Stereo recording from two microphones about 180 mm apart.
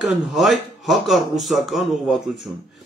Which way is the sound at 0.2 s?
Centre (ahead or behind).